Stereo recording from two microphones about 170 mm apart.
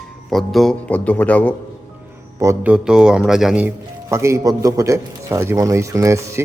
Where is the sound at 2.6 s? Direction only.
5° right (ahead or behind).